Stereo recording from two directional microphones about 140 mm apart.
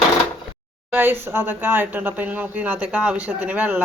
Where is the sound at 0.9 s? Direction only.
15° right (ahead or behind).